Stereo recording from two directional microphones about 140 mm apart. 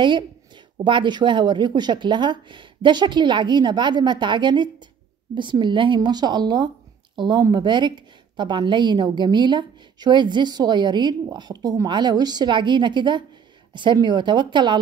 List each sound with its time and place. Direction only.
0.7 s a woman's voice: 35° right (ahead or behind)